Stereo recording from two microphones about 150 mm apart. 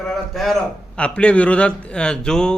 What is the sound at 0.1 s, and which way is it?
A man's voice, centre (ahead or behind).